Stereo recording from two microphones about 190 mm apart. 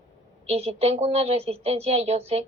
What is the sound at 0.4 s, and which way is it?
A woman's voice, 35° right (ahead or behind).